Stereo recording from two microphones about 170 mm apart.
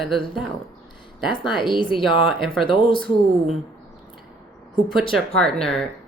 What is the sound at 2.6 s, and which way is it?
Speech, 30° left (ahead or behind).